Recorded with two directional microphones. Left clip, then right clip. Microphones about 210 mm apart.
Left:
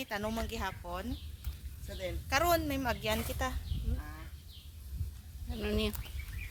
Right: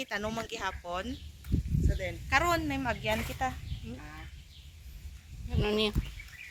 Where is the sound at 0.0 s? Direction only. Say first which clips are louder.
Right 2 dB; 40° left (ahead or behind).